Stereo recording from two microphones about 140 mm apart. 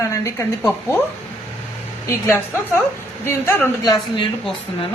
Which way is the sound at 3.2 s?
20° left (ahead or behind).